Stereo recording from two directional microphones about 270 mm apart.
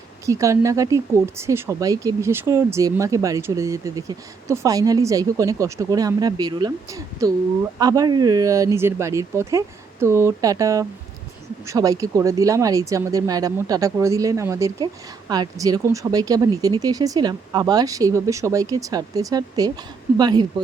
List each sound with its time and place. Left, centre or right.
0.3 s speech: centre